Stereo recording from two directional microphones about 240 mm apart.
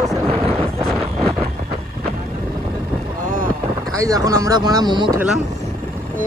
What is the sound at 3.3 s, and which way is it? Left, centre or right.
Boat, right.